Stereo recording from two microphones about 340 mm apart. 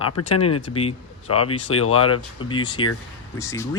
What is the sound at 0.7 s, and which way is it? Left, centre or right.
Speech, centre.